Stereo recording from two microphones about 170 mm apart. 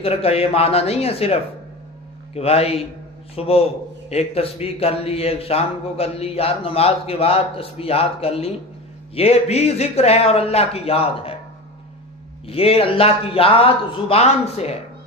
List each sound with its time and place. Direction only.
0.0 s speech: 35° left (ahead or behind)
12.4 s speech: 35° left (ahead or behind)